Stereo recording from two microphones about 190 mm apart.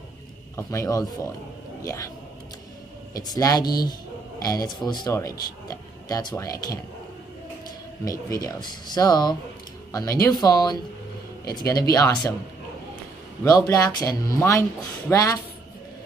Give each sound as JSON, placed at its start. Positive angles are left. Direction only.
{"t": 0.6, "sound": "speech", "side_deg": 15}
{"t": 3.2, "sound": "speech", "side_deg": 20}
{"t": 8.0, "sound": "speech", "side_deg": 20}
{"t": 13.4, "sound": "speech", "side_deg": 20}